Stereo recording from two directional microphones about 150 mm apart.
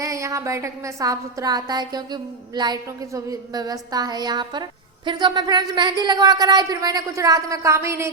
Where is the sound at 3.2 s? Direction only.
25° right (ahead or behind).